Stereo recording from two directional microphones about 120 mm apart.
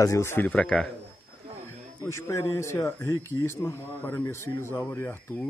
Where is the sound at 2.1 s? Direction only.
25° left (ahead or behind).